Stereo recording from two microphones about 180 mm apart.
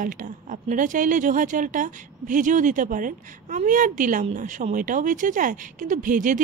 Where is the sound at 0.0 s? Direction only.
50° right (ahead or behind).